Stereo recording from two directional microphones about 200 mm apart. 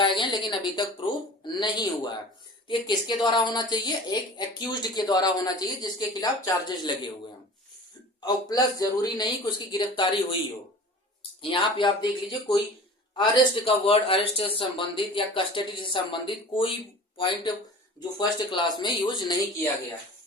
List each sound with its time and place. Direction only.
0.0 s a woman's voice: 25° left (ahead or behind)
8.2 s a woman's voice: 20° left (ahead or behind)
13.1 s a woman's voice: 25° left (ahead or behind)